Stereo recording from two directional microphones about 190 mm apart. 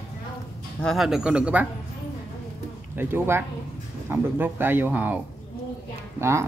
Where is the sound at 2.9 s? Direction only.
10° right (ahead or behind).